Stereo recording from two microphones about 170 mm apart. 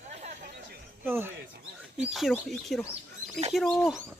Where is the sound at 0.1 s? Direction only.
40° right (ahead or behind).